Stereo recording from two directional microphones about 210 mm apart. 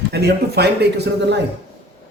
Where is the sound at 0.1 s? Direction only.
50° right (ahead or behind).